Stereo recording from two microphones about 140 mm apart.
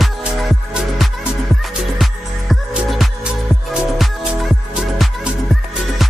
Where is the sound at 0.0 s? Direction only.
Centre (ahead or behind).